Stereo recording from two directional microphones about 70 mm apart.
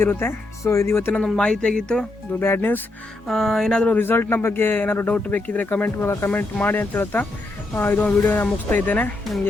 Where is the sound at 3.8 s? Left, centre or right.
Left.